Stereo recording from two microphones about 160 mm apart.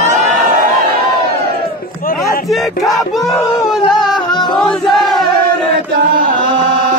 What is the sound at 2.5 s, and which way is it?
Crowd, centre (ahead or behind).